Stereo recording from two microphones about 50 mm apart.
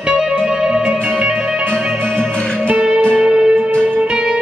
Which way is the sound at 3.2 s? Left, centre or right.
Centre.